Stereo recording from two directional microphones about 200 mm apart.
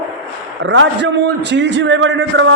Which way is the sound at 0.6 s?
65° right (ahead or behind).